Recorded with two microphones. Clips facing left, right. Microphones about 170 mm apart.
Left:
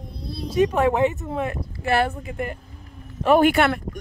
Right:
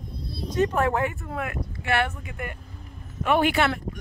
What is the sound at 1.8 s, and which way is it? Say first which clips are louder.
Speech: left 4 dB; 35° left (ahead or behind).